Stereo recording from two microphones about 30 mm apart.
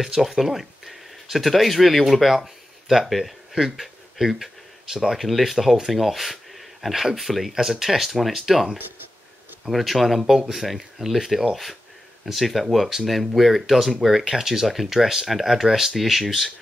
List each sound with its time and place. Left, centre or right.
0.2 s speech: centre
2.2 s speech: centre
3.5 s speech: centre
7.5 s speech: centre
9.7 s speech: centre
10.2 s speech: centre
12.4 s speech: centre
15.0 s speech: centre
15.2 s speech: centre